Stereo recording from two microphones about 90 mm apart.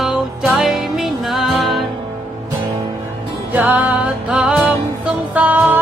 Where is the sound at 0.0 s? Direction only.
5° right (ahead or behind).